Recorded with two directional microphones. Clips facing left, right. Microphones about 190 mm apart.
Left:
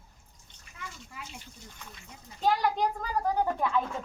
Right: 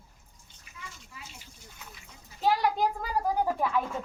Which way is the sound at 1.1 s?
60° left (ahead or behind).